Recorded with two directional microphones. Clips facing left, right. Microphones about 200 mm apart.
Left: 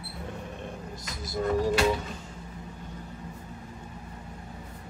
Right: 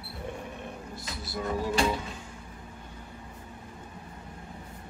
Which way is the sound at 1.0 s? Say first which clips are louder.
Left 3 dB; 40° left (ahead or behind).